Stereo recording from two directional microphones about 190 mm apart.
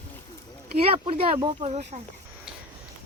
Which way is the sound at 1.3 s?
30° right (ahead or behind).